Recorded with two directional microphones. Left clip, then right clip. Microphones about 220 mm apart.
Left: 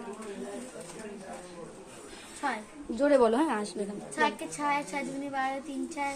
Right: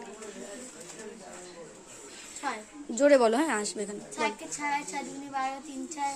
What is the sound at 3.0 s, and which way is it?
Speech, 45° right (ahead or behind).